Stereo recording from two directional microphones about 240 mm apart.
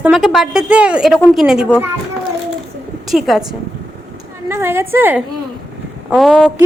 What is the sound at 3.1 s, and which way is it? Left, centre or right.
Speech, centre.